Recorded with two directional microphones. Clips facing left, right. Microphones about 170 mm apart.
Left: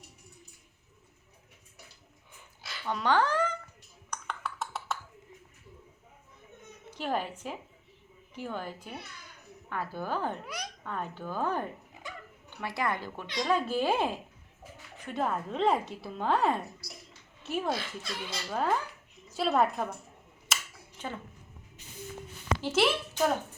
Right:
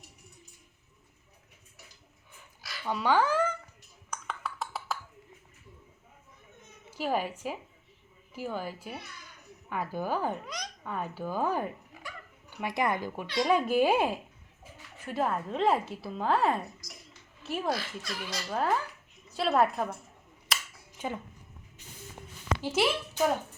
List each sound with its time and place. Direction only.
2.8 s speech: 10° right (ahead or behind)
4.1 s a sound: centre (ahead or behind)
6.9 s speech: 10° right (ahead or behind)
10.4 s babbling: 10° left (ahead or behind)
10.8 s a woman's voice: 10° right (ahead or behind)
17.7 s speech: 25° left (ahead or behind)
18.5 s a woman's voice: centre (ahead or behind)
20.5 s a sound: centre (ahead or behind)
21.0 s a woman's voice: 10° right (ahead or behind)
22.6 s a woman's voice: 10° right (ahead or behind)